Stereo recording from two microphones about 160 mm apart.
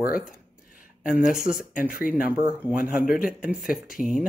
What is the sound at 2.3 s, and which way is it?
Speech, 10° right (ahead or behind).